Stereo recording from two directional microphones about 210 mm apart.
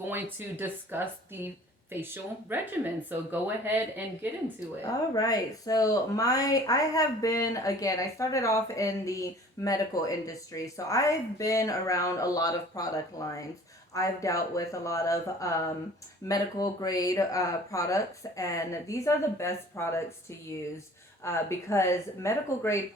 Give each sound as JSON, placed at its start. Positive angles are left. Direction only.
{"t": 0.1, "sound": "speech", "side_deg": -10}
{"t": 2.5, "sound": "speech", "side_deg": -10}
{"t": 5.1, "sound": "speech", "side_deg": 15}
{"t": 21.2, "sound": "speech", "side_deg": 15}